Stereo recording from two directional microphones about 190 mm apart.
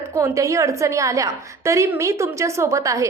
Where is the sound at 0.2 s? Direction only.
15° right (ahead or behind).